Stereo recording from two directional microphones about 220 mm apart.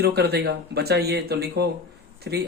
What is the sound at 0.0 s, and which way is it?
A man's voice, 45° right (ahead or behind).